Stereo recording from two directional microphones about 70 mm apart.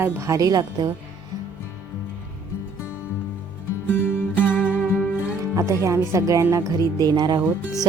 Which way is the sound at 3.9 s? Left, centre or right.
Left.